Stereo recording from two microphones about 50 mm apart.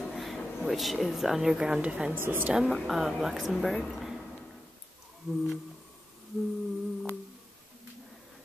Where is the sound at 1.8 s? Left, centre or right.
Right.